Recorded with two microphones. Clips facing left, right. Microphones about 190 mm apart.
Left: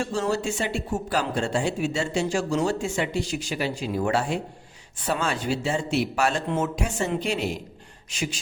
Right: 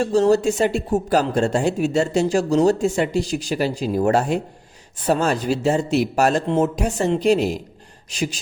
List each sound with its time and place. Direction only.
0.0 s speech: 40° right (ahead or behind)